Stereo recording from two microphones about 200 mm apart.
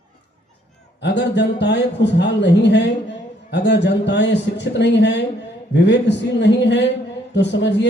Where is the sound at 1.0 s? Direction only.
60° left (ahead or behind).